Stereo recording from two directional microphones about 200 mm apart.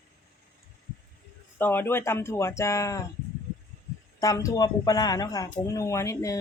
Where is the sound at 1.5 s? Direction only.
10° left (ahead or behind).